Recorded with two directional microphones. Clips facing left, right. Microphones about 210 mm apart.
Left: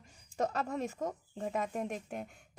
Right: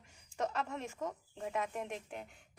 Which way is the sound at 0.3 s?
40° left (ahead or behind).